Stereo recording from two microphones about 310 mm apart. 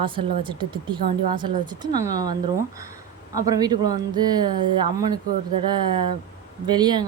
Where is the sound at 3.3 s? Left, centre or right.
Centre.